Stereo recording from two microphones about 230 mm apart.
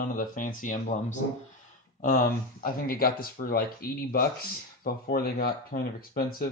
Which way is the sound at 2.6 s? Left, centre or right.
Left.